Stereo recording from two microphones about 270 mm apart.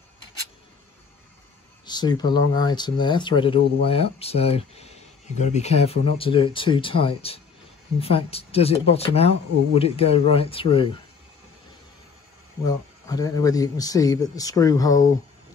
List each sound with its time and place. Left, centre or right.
1.9 s speech: centre
12.6 s speech: centre